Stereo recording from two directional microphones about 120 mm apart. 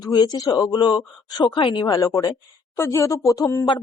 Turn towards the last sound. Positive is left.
turn(degrees=30)  # may be behind; listen again after turning